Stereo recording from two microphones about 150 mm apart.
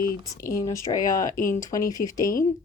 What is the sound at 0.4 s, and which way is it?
Speech, 20° left (ahead or behind).